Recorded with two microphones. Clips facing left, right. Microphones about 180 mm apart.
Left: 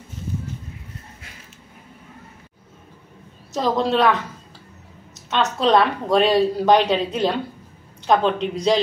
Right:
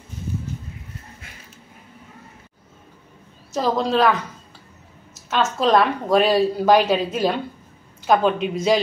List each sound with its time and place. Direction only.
3.5 s speech: centre (ahead or behind)
5.3 s speech: centre (ahead or behind)